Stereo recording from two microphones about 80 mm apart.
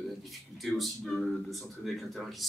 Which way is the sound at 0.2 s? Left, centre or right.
Centre.